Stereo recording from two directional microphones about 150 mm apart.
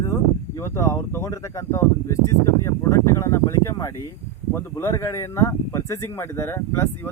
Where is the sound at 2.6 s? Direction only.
20° left (ahead or behind).